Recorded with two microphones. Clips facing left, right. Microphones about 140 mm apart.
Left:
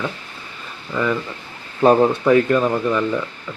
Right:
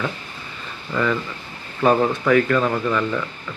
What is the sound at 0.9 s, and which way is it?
Speech, 10° left (ahead or behind).